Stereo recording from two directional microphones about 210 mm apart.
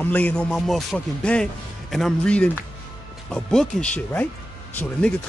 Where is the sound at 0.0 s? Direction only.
5° left (ahead or behind).